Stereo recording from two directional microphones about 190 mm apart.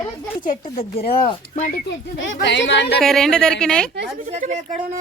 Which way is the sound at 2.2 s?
70° left (ahead or behind).